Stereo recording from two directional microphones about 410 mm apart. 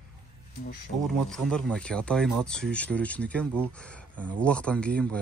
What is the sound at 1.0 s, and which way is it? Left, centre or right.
Speech, centre.